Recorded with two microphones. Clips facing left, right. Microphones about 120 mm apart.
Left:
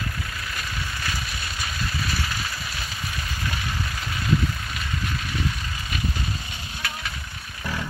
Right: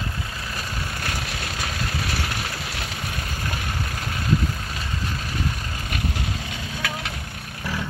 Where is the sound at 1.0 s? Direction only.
65° right (ahead or behind).